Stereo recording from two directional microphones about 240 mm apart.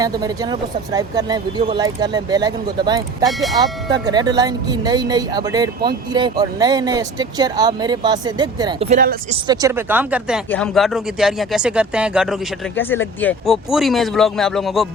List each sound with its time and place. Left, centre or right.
0.0 s speech: centre
3.2 s speech: centre
3.6 s speech: centre
8.9 s speech: right
9.5 s speech: centre
12.7 s speech: centre